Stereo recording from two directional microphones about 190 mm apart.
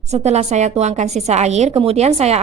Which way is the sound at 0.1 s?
35° right (ahead or behind).